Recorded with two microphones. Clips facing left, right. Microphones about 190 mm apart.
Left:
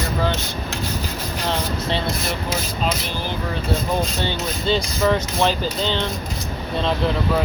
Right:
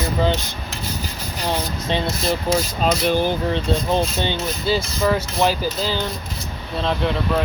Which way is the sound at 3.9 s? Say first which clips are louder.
Right 3 dB; 20° right (ahead or behind).